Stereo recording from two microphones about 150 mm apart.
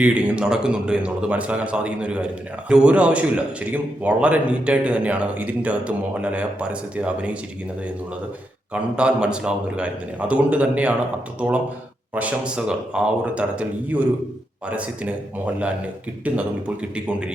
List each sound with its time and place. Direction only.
0.0 s a man's voice: 5° right (ahead or behind)
8.7 s a man's voice: 5° right (ahead or behind)
12.1 s a man's voice: 10° right (ahead or behind)
16.2 s a man's voice: 10° right (ahead or behind)